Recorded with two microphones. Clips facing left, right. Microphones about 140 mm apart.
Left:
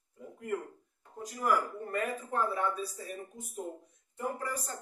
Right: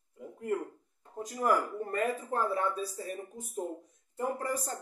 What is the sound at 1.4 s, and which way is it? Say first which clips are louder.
Speech: right 1 dB; 35° right (ahead or behind).